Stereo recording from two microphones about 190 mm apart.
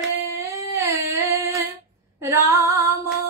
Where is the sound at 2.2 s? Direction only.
15° right (ahead or behind).